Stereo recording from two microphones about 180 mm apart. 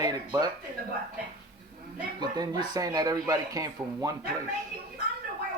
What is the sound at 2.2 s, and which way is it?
Speech, 25° right (ahead or behind).